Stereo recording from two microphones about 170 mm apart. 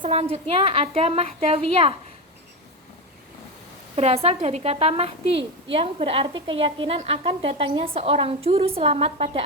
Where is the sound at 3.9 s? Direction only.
35° right (ahead or behind).